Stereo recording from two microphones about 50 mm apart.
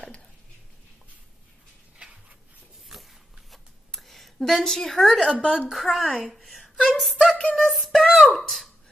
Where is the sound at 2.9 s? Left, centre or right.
Centre.